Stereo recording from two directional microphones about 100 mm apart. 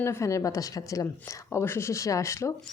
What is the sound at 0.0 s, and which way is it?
A woman's voice, 30° left (ahead or behind).